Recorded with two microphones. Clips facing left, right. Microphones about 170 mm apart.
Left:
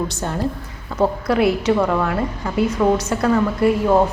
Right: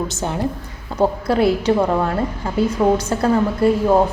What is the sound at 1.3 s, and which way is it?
A woman's voice, 30° right (ahead or behind).